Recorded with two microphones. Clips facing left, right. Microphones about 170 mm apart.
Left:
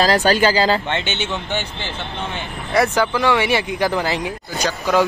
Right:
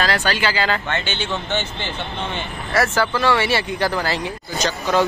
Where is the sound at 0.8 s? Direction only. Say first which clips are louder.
Left 2 dB; 25° left (ahead or behind).